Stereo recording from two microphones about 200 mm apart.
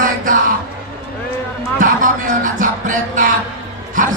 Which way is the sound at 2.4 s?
40° right (ahead or behind).